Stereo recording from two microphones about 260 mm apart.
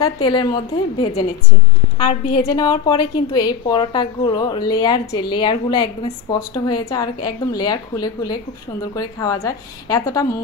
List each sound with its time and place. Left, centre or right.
0.0 s a woman's voice: centre
2.0 s a woman's voice: centre